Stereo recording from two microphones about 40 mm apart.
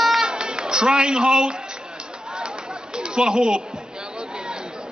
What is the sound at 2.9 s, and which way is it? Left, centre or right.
Chatter, centre.